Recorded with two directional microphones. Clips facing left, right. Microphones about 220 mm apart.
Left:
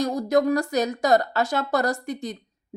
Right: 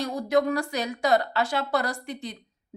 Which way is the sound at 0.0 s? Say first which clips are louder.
Left 3 dB; 40° left (ahead or behind).